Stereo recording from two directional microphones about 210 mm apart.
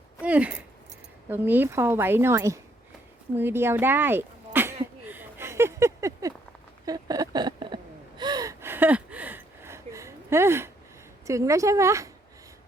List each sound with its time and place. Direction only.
0.2 s a woman's voice: 5° right (ahead or behind)
3.3 s a sound: 10° right (ahead or behind)
8.2 s gasp: 20° right (ahead or behind)
11.3 s a woman's voice: 15° right (ahead or behind)